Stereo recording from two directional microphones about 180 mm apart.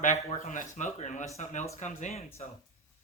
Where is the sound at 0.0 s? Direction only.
45° left (ahead or behind).